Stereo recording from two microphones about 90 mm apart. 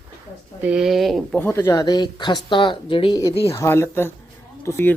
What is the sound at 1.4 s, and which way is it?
Speech, 30° left (ahead or behind).